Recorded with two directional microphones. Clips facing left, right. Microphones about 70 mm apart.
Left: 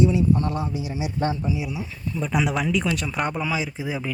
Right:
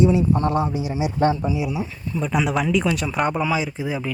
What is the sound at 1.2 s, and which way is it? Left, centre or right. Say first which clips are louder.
Speech: right 5 dB; right.